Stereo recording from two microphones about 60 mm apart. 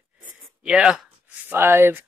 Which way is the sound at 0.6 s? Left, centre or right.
Centre.